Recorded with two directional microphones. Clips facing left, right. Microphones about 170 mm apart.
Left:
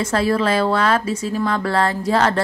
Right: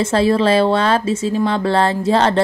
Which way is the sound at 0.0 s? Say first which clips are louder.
Right 4 dB; 25° right (ahead or behind).